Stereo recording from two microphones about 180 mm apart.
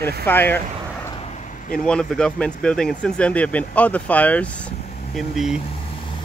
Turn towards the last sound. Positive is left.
turn(degrees=0)  # may be behind; listen again after turning